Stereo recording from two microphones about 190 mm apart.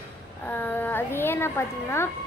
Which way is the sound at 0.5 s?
10° left (ahead or behind).